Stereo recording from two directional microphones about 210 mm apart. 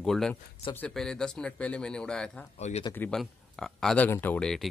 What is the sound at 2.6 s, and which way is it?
Speech, 35° left (ahead or behind).